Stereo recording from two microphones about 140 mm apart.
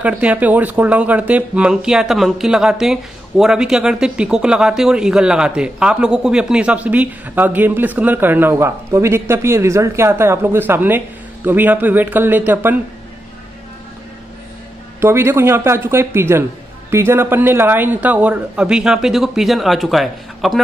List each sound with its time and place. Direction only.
0.0 s speech: 10° right (ahead or behind)
15.0 s speech: 15° right (ahead or behind); by 20.6 s centre (ahead or behind)